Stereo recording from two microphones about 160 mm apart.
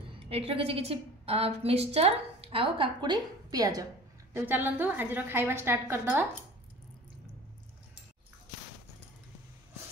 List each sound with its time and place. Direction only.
0.2 s a woman's voice: 35° right (ahead or behind); by 6.2 s 15° right (ahead or behind)